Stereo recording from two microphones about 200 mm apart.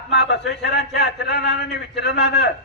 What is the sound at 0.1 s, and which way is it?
A man's voice, 55° left (ahead or behind).